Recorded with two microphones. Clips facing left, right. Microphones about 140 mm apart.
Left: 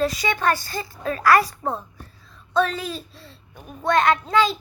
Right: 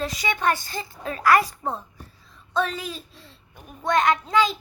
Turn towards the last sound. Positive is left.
turn(degrees=-15)  # may be behind; listen again after turning